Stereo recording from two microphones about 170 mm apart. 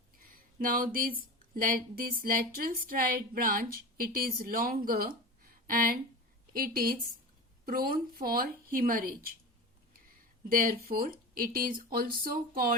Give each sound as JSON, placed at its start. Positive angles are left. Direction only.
{"t": 0.2, "sound": "a sound", "side_deg": -55}
{"t": 1.4, "sound": "a woman's voice", "side_deg": -55}
{"t": 10.6, "sound": "a woman's voice", "side_deg": -60}